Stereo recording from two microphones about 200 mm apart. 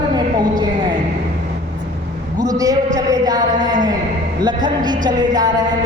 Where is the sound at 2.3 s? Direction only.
15° right (ahead or behind).